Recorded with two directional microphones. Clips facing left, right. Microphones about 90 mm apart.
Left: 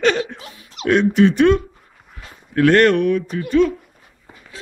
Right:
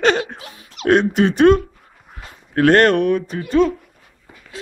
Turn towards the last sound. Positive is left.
turn(degrees=-30)  # may be behind; listen again after turning